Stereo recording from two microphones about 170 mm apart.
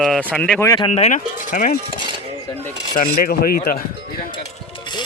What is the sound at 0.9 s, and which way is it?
Speech, 40° left (ahead or behind).